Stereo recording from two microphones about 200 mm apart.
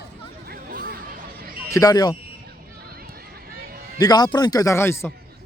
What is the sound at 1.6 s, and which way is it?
Speech, 15° left (ahead or behind).